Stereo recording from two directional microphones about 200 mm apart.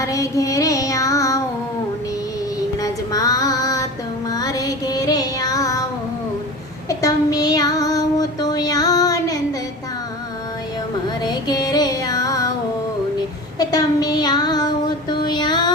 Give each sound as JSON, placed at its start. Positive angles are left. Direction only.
{"t": 0.0, "sound": "child singing", "side_deg": 15}
{"t": 2.8, "sound": "female singing", "side_deg": 20}
{"t": 4.3, "sound": "music", "side_deg": 20}
{"t": 6.8, "sound": "child singing", "side_deg": 20}
{"t": 11.2, "sound": "music", "side_deg": 20}
{"t": 13.6, "sound": "child singing", "side_deg": 20}
{"t": 15.1, "sound": "female singing", "side_deg": 20}